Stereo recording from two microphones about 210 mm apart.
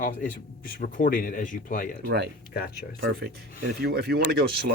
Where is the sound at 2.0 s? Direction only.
50° right (ahead or behind).